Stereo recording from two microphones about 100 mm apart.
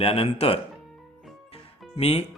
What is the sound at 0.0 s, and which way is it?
Speech, 80° left.